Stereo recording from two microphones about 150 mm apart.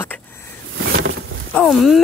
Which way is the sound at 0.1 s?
10° left (ahead or behind).